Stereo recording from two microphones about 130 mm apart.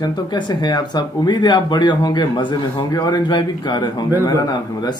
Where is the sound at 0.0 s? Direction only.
35° left (ahead or behind).